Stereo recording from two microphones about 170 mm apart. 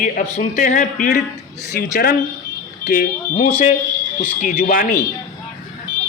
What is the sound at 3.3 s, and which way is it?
A man's voice, 45° left (ahead or behind).